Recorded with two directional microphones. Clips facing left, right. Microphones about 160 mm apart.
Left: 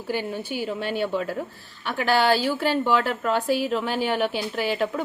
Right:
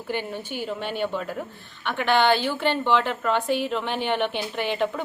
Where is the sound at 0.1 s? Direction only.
5° left (ahead or behind).